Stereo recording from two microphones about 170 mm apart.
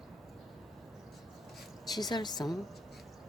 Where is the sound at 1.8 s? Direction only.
25° left (ahead or behind).